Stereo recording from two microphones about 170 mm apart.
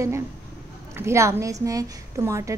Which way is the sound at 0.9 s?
15° right (ahead or behind).